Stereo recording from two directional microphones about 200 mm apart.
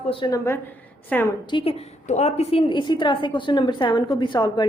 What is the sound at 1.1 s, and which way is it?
Speech, 5° left (ahead or behind).